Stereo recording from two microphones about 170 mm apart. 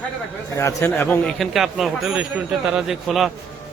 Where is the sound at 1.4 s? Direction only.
Centre (ahead or behind).